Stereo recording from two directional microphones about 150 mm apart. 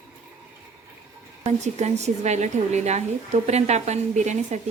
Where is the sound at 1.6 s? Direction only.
50° right (ahead or behind).